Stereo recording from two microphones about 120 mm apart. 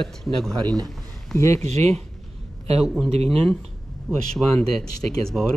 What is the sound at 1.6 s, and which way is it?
Speech, 65° right (ahead or behind).